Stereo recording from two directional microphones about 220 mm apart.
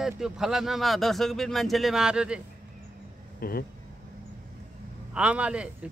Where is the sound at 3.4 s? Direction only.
45° left (ahead or behind).